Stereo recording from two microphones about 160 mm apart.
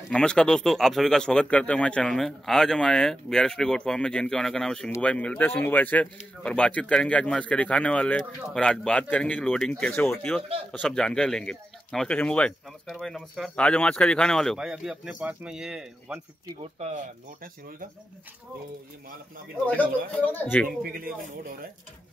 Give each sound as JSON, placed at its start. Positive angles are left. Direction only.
{"t": 0.1, "sound": "speech", "side_deg": 5}
{"t": 16.8, "sound": "speech", "side_deg": -50}
{"t": 20.2, "sound": "speech", "side_deg": 10}
{"t": 20.8, "sound": "speech", "side_deg": -65}